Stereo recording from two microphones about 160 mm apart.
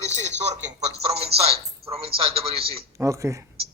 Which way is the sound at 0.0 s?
45° right (ahead or behind).